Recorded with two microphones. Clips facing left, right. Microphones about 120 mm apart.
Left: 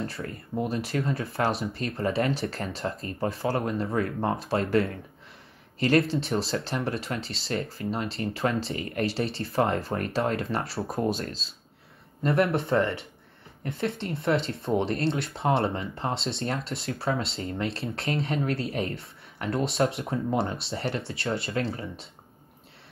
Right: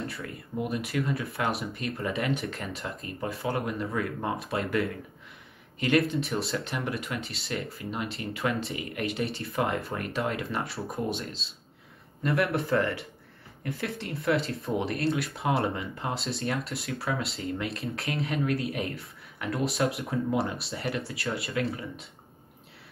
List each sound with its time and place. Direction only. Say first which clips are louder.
0.1 s speech: left 3 dB; 30° left (ahead or behind)
12.2 s speech: left 3 dB; 25° left (ahead or behind)